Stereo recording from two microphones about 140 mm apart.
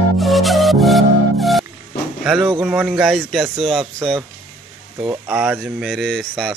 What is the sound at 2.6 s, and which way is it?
Speech, 10° right (ahead or behind).